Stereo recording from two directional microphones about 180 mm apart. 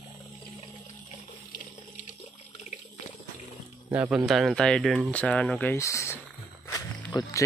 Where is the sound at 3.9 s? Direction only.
10° right (ahead or behind).